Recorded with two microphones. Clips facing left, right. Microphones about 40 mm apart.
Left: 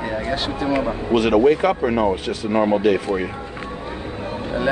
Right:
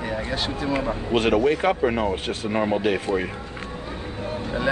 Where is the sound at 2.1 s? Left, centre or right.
Right.